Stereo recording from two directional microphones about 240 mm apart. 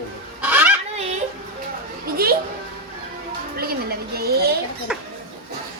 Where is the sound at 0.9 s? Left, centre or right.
Right.